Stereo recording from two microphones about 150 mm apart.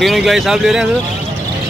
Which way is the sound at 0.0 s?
Centre (ahead or behind).